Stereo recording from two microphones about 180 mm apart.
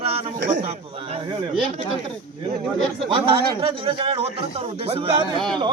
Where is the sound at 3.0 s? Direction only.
30° right (ahead or behind).